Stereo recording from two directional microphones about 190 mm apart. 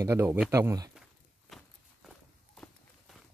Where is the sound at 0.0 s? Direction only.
15° right (ahead or behind).